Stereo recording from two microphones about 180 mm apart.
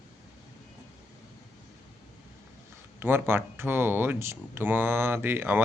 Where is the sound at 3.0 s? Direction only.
10° right (ahead or behind).